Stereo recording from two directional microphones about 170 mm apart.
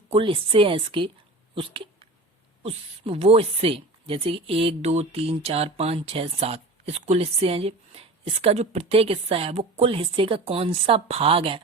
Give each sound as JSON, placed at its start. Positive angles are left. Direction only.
{"t": 0.1, "sound": "speech", "side_deg": -30}
{"t": 2.6, "sound": "speech", "side_deg": -35}